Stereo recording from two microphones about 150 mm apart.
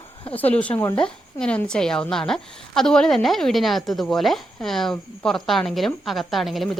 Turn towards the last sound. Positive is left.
turn(degrees=0)  # may be behind; listen again after turning